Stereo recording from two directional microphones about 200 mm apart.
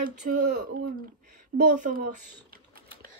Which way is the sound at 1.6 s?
40° right (ahead or behind).